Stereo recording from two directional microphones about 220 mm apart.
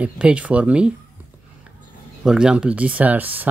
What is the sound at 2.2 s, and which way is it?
Speech, 5° right (ahead or behind).